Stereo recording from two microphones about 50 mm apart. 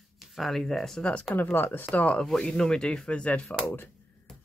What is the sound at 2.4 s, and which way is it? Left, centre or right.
Speech, centre.